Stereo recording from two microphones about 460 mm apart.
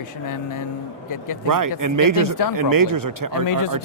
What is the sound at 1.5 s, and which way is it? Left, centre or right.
Speech, right.